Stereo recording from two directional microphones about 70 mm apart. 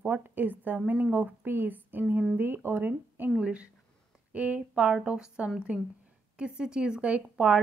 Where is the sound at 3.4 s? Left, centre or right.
Centre.